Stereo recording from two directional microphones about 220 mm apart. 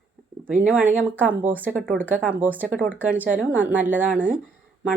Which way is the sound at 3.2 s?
5° right (ahead or behind).